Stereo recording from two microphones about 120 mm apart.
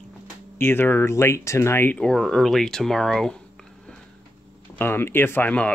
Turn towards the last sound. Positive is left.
turn(degrees=15)  # may be behind; listen again after turning